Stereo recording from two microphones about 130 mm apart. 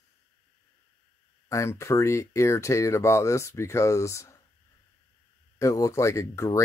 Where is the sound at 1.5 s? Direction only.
20° left (ahead or behind).